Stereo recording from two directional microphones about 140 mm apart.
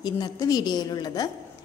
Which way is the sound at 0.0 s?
30° left (ahead or behind).